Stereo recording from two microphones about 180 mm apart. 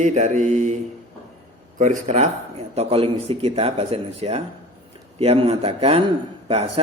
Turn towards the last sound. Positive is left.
turn(degrees=-35)  # may be behind; listen again after turning